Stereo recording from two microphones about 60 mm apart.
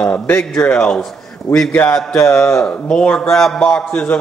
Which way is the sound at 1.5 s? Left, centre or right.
Left.